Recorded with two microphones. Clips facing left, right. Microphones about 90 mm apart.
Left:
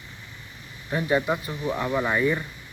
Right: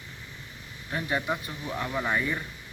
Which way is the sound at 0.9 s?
15° left (ahead or behind).